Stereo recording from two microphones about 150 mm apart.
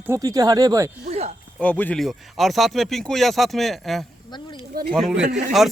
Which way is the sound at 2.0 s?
Centre (ahead or behind).